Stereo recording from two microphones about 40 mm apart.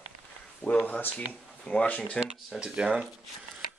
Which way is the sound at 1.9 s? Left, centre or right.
Left.